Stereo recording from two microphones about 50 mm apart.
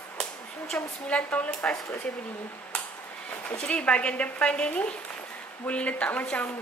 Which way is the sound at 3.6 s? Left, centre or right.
Left.